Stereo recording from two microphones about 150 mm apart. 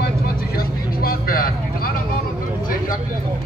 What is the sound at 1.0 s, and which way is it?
Vehicle, 75° left (ahead or behind).